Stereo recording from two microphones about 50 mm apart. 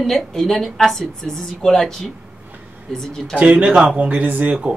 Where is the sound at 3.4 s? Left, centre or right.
Right.